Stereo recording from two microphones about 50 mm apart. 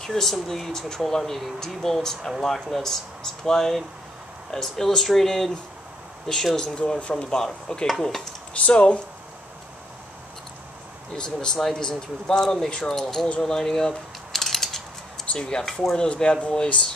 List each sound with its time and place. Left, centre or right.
0.0 s speech: centre
8.6 s speech: left
11.1 s speech: centre
13.4 s a sound: centre
15.3 s speech: centre
16.1 s speech: left